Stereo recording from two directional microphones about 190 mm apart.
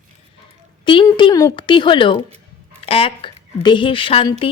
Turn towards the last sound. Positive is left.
turn(degrees=30)  # may be behind; listen again after turning